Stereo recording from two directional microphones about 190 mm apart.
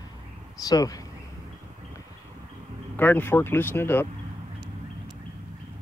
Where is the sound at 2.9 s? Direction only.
10° left (ahead or behind).